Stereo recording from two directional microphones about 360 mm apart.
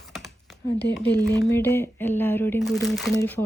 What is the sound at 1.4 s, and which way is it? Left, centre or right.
Speech, centre.